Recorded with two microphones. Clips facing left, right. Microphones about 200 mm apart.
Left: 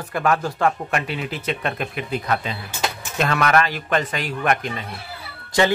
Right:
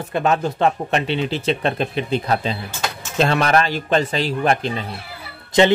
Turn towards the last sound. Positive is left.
turn(degrees=-20)  # may be behind; listen again after turning